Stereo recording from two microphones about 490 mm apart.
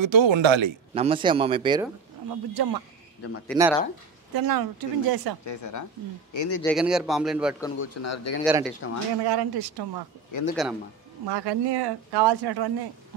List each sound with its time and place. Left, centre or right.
0.0 s speech: right
0.9 s a man's voice: centre
2.2 s speech: right
3.4 s a man's voice: centre
4.3 s speech: right
5.4 s speech: left
6.6 s a man's voice: centre
7.8 s speech: left
8.5 s a man's voice: centre
9.2 s speech: right
10.5 s a man's voice: centre
11.2 s speech: right